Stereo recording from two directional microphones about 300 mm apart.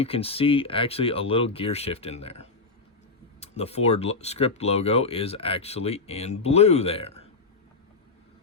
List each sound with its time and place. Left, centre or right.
0.0 s speech: centre